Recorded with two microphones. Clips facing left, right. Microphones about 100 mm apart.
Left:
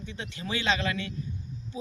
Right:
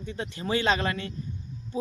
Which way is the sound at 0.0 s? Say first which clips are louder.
Right 4 dB; 40° right (ahead or behind).